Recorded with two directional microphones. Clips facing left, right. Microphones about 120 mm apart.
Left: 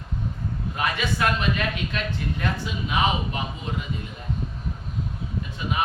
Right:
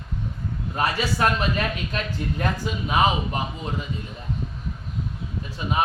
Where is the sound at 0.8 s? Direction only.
35° right (ahead or behind).